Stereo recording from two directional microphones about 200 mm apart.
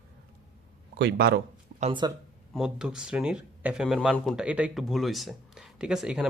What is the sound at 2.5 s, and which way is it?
Speech, 5° right (ahead or behind).